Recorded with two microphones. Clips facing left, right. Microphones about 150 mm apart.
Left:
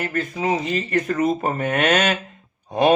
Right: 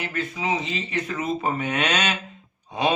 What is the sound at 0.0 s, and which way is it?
Speech, 45° left (ahead or behind).